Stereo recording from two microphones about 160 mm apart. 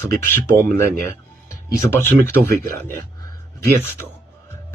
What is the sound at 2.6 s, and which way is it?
Speech, 60° right (ahead or behind).